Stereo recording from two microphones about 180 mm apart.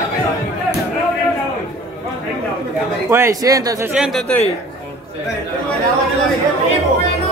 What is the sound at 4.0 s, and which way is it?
Speech, centre (ahead or behind).